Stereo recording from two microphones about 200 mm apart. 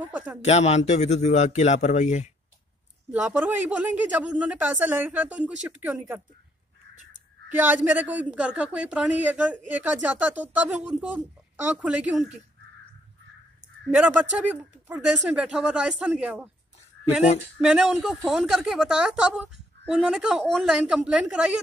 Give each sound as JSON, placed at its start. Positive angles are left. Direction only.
{"t": 0.0, "sound": "speech", "side_deg": -10}
{"t": 0.4, "sound": "a man's voice", "side_deg": 35}
{"t": 3.1, "sound": "speech", "side_deg": -5}
{"t": 7.5, "sound": "speech", "side_deg": -10}
{"t": 13.9, "sound": "speech", "side_deg": -5}
{"t": 17.6, "sound": "speech", "side_deg": -5}